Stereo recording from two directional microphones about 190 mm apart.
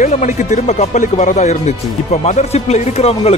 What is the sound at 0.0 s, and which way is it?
Speech, 40° left (ahead or behind).